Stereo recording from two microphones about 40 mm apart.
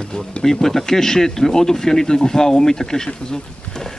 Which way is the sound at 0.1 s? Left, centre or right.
Centre.